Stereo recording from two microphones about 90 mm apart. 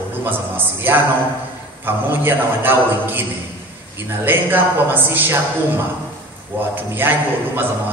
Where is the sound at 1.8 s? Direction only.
25° right (ahead or behind).